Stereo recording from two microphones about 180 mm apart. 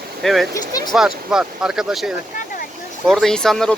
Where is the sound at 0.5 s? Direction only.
20° left (ahead or behind).